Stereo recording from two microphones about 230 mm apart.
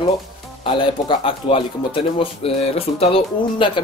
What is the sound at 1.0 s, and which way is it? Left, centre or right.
Speech, left.